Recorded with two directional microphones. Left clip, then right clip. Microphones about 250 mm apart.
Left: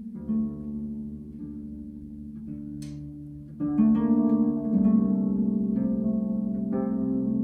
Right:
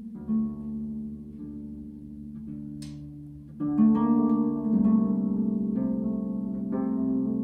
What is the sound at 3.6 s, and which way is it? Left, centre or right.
Music, right.